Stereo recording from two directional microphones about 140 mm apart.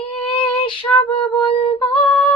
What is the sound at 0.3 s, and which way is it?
Child singing, 40° left (ahead or behind).